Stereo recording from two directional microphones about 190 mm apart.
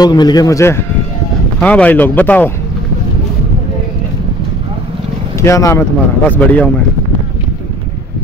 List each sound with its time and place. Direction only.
0.0 s a man's voice: 20° left (ahead or behind)
5.4 s speech: 15° left (ahead or behind)